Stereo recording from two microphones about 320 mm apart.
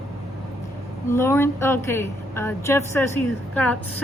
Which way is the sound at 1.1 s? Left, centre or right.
Centre.